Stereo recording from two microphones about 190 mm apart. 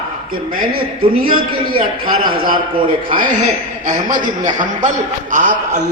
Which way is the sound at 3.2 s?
45° right (ahead or behind).